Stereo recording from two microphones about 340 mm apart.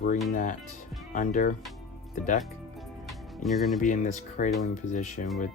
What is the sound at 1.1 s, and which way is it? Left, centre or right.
Speech, left.